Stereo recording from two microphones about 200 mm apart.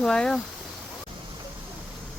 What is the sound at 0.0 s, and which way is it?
Speech, 5° left (ahead or behind).